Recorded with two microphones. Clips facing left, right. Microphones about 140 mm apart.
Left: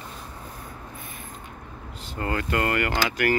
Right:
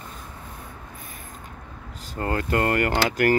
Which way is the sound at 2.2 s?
35° right (ahead or behind).